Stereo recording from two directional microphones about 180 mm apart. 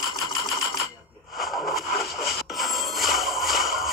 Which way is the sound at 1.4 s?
Centre (ahead or behind).